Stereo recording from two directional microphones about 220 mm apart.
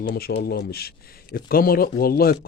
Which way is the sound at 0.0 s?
45° left (ahead or behind).